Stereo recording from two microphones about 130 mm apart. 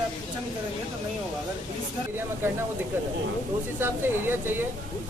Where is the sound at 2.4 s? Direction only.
20° right (ahead or behind).